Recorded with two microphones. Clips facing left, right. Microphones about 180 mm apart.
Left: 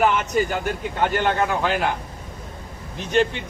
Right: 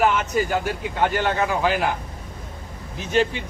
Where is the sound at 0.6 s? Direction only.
50° left (ahead or behind).